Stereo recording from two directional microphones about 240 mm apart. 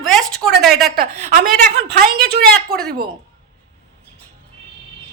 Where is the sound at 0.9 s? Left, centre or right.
Right.